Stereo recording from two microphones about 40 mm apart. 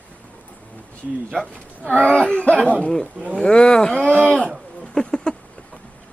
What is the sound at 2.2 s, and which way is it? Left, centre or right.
Speech, left.